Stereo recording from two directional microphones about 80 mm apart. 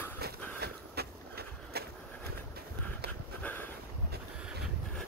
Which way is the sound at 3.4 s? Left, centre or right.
Left.